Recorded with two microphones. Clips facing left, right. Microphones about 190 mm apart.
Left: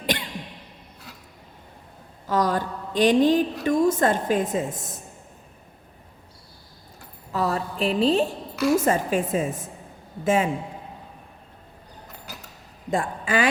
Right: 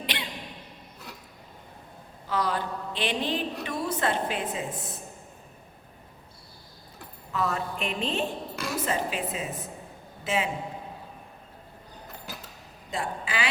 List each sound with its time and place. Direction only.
2.2 s a woman's voice: 45° left (ahead or behind)
7.3 s a woman's voice: 35° left (ahead or behind)
8.7 s a woman's voice: 50° left (ahead or behind)
12.9 s a woman's voice: 50° left (ahead or behind)